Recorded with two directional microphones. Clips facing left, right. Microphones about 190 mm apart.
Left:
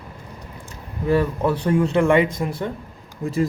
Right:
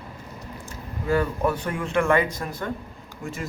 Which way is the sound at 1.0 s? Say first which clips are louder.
Left 3 dB; 25° left (ahead or behind).